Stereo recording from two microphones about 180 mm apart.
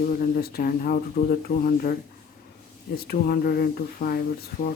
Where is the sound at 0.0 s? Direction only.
50° left (ahead or behind).